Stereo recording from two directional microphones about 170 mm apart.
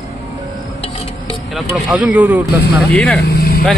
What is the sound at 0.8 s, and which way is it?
Music, 35° left (ahead or behind).